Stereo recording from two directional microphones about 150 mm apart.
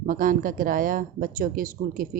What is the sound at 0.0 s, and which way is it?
Speech, 65° right (ahead or behind).